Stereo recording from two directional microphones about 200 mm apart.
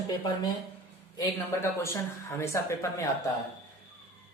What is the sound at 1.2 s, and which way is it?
Speech, 15° left (ahead or behind).